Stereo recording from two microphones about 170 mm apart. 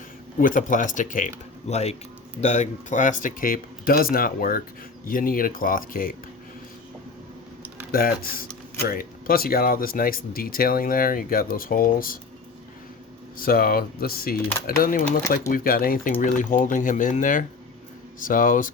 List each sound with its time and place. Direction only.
0.3 s speech: 55° left (ahead or behind)
7.9 s speech: 60° left (ahead or behind)
13.3 s speech: 60° left (ahead or behind)